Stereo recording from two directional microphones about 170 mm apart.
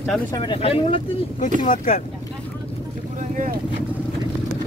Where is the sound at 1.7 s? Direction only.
55° left (ahead or behind).